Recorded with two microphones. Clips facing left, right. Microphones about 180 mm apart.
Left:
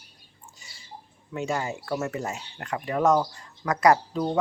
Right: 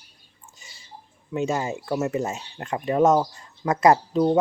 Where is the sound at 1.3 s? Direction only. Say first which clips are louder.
Right 4 dB; 20° right (ahead or behind).